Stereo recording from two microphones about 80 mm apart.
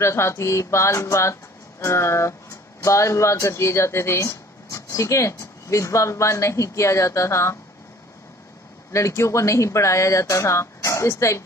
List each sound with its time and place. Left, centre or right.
0.0 s speech: left
8.9 s speech: left